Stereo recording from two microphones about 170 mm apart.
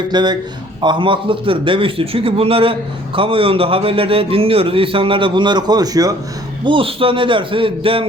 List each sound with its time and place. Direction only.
0.1 s a man's voice: 25° right (ahead or behind)
6.7 s a man's voice: 30° right (ahead or behind)